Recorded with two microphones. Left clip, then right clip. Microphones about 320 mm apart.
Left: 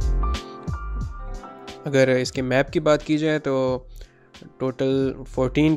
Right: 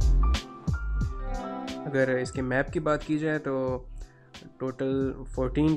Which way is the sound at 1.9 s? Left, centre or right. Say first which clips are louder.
Left 8 dB; centre.